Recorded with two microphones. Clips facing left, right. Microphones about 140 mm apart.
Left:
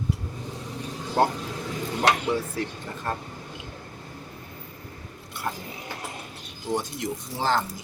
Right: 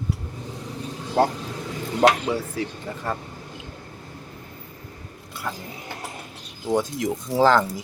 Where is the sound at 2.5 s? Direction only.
90° right.